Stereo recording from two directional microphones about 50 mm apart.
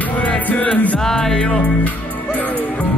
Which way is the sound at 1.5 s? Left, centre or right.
Left.